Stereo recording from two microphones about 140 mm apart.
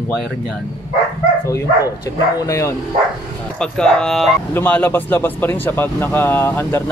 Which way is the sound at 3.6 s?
5° left (ahead or behind).